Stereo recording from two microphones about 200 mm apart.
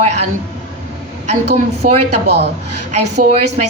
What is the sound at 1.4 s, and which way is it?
Speech, 55° right (ahead or behind).